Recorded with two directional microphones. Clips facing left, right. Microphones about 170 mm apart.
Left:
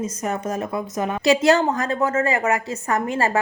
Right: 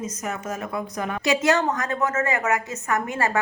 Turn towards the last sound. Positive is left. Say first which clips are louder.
# left 3 dB
turn(degrees=30)  # may be behind; listen again after turning